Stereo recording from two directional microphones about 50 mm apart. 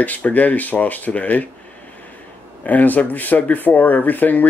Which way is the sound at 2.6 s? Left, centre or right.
Left.